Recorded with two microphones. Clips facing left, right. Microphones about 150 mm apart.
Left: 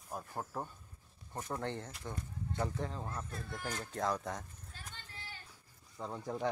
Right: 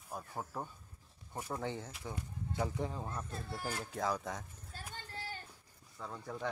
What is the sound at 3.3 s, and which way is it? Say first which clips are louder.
Speech: right 1 dB; 30° right (ahead or behind).